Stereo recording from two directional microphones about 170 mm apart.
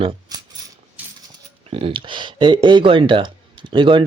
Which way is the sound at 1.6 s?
35° right (ahead or behind).